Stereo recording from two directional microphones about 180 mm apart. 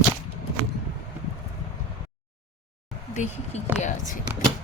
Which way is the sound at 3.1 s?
40° left (ahead or behind).